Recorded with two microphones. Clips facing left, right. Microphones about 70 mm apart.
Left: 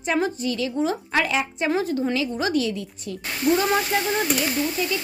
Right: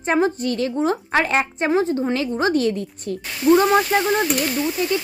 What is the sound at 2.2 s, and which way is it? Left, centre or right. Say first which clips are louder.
Speech: right 3 dB; right.